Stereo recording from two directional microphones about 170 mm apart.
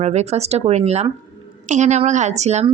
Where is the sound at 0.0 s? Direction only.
40° right (ahead or behind).